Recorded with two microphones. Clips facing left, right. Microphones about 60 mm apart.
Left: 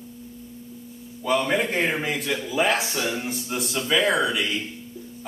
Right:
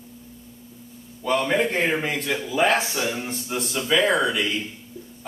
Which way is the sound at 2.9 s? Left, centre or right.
Centre.